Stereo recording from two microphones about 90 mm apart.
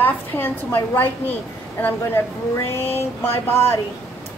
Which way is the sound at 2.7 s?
25° left (ahead or behind).